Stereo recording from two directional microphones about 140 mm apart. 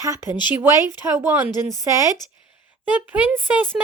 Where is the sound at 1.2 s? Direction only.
15° right (ahead or behind).